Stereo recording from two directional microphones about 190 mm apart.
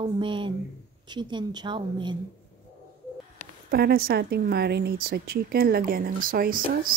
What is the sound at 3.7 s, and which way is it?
A woman's voice, 50° right (ahead or behind).